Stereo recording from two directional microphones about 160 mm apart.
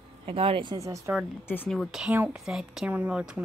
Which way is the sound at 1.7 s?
Centre (ahead or behind).